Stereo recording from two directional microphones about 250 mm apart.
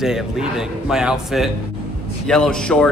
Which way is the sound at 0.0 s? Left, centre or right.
Centre.